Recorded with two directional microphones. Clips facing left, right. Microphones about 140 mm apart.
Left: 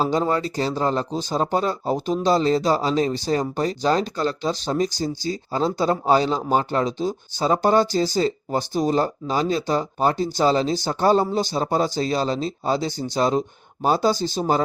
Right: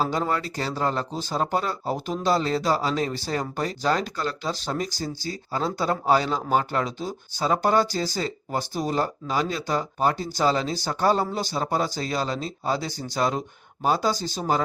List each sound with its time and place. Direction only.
0.0 s speech: 25° left (ahead or behind)